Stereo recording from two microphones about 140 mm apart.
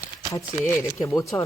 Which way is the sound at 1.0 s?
20° left (ahead or behind).